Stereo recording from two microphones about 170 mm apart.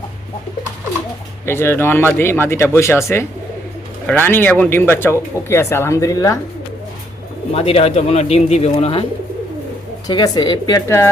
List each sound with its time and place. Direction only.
1.5 s speech: 15° left (ahead or behind)
7.5 s speech: 35° left (ahead or behind)
10.1 s speech: 25° left (ahead or behind)